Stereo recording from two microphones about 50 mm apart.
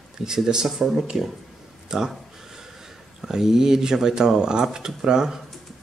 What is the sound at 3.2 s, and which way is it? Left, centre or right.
Speech, centre.